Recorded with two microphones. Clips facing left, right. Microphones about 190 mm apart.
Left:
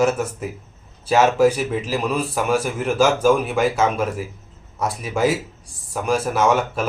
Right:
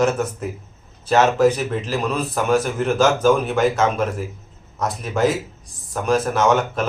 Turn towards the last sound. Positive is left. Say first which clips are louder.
# right 1 dB
turn(degrees=10)  # may be behind; listen again after turning